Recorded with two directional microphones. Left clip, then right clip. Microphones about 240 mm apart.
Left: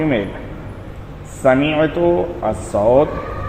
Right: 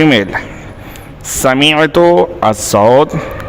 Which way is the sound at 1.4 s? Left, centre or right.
Right.